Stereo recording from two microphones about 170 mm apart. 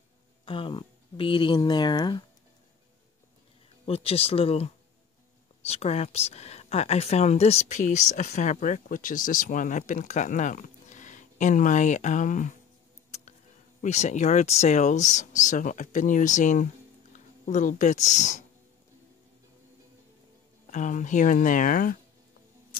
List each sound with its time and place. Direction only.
0.5 s speech: 30° left (ahead or behind)
3.8 s speech: 35° left (ahead or behind)
13.7 s speech: 45° left (ahead or behind)
20.7 s speech: 45° left (ahead or behind)